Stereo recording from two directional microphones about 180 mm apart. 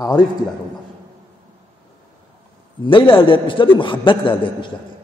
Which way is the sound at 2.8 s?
30° left (ahead or behind).